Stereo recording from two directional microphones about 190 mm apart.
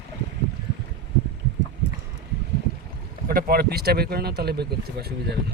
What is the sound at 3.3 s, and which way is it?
Speech, 50° right (ahead or behind).